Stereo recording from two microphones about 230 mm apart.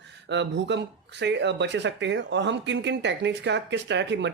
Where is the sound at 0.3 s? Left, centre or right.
Right.